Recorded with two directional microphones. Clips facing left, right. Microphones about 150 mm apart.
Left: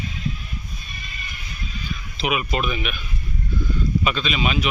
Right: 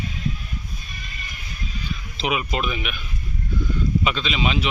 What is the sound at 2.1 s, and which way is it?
Speech, 25° right (ahead or behind).